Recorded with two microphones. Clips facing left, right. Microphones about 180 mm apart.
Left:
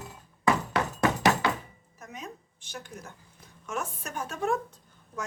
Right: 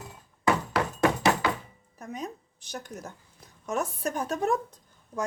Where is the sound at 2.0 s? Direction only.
35° right (ahead or behind).